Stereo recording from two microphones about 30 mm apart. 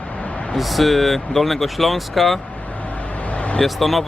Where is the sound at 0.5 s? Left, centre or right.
Centre.